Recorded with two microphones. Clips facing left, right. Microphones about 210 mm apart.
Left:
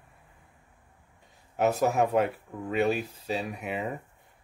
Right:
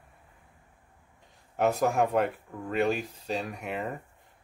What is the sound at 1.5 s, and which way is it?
Speech, 5° left (ahead or behind).